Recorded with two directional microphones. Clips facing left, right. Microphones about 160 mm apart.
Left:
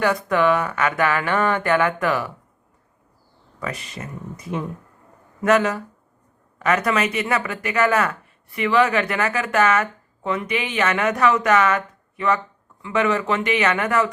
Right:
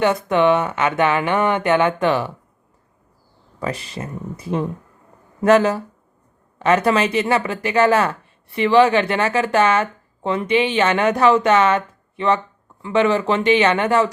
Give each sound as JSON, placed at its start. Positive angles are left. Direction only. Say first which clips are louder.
{"t": 0.0, "sound": "speech", "louder": "right 3 dB", "side_deg": -25}
{"t": 3.6, "sound": "speech", "louder": "right 4 dB", "side_deg": -30}